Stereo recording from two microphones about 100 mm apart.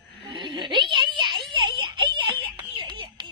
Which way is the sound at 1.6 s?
55° right (ahead or behind).